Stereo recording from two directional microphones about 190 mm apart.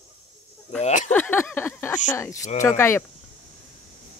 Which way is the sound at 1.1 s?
10° left (ahead or behind).